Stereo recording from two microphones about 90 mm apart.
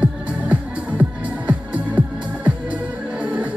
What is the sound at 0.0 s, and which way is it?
Music, 15° right (ahead or behind).